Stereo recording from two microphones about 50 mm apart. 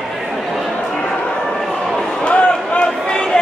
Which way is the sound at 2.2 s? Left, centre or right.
Left.